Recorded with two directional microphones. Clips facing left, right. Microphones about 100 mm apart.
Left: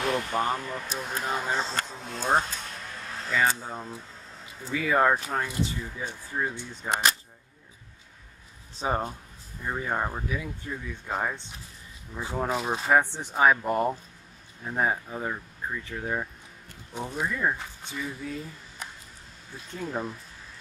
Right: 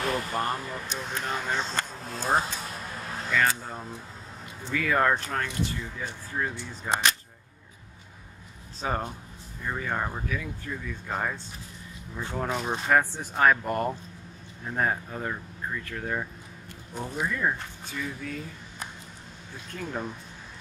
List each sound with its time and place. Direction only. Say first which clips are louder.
0.0 s speech: left 2 dB; centre (ahead or behind)
8.8 s speech: left 2 dB; 15° left (ahead or behind)
19.7 s speech: left 1 dB; 5° left (ahead or behind)